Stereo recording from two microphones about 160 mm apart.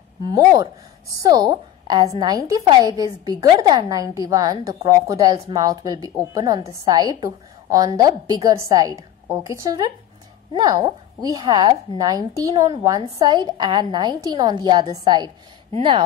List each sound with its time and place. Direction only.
0.2 s a woman's voice: 25° right (ahead or behind)